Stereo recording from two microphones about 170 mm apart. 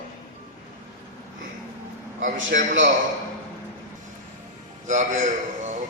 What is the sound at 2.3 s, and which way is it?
Speech, 90° right.